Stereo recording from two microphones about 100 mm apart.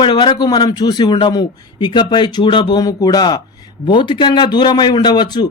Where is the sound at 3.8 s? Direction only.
50° left (ahead or behind).